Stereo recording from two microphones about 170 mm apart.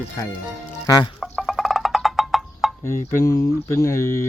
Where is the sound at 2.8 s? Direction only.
15° left (ahead or behind).